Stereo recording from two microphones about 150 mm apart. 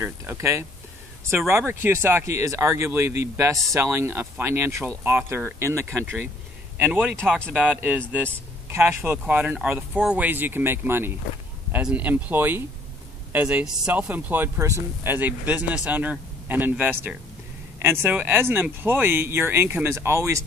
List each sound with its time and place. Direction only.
0.0 s speech: 20° right (ahead or behind)
1.7 s speech: 15° right (ahead or behind)